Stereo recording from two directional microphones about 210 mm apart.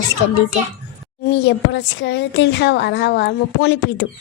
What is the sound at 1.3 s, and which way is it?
A woman's voice, 55° left (ahead or behind).